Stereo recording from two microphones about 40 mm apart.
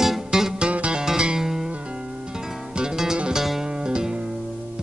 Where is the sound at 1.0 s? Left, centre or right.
Centre.